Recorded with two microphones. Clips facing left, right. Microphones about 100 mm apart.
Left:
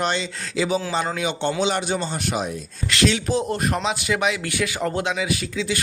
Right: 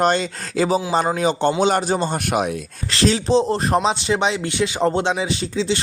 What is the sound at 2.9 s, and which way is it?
A man's voice, 35° right (ahead or behind).